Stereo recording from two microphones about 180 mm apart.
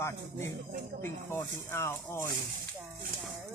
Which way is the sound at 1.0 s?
15° left (ahead or behind).